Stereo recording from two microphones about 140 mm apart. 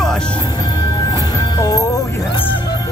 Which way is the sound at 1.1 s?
25° left (ahead or behind).